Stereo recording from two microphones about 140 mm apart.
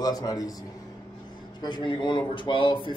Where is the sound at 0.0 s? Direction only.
25° left (ahead or behind).